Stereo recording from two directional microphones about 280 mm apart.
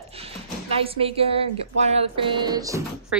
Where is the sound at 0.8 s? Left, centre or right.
Centre.